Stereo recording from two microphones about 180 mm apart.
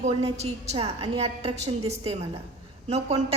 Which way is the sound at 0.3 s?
35° right (ahead or behind).